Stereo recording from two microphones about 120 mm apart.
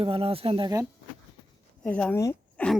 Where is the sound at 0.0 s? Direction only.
50° right (ahead or behind).